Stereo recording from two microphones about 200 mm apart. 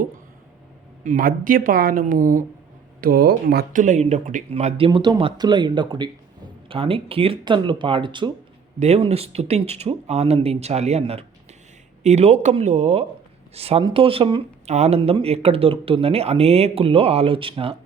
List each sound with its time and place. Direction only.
1.0 s speech: 45° right (ahead or behind); by 17.7 s 25° right (ahead or behind)